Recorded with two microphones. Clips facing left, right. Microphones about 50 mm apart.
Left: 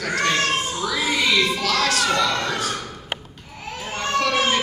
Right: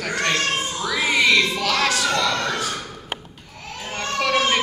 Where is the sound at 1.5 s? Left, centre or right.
Centre.